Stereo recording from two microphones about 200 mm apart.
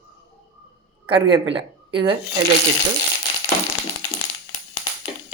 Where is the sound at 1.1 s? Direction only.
25° right (ahead or behind).